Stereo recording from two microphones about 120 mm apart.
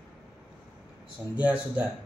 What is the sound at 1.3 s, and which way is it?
Speech, 10° right (ahead or behind).